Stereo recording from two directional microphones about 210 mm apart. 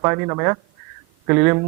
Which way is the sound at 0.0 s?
15° right (ahead or behind).